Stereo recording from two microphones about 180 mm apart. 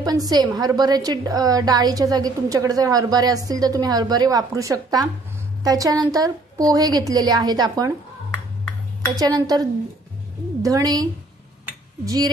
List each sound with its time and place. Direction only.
0.0 s a woman's voice: 20° right (ahead or behind)
9.1 s a woman's voice: 20° right (ahead or behind)